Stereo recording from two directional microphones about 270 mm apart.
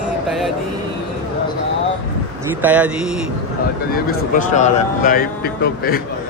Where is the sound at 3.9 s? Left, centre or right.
Left.